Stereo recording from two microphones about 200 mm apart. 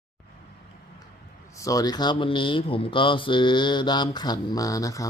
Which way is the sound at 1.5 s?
15° left (ahead or behind).